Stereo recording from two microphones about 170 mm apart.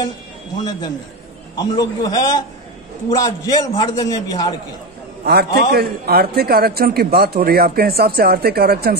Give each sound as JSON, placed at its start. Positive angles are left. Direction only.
{"t": 0.7, "sound": "a man's voice", "side_deg": 25}
{"t": 5.2, "sound": "a man's voice", "side_deg": -65}